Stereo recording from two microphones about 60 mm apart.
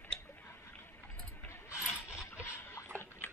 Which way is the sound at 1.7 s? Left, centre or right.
Left.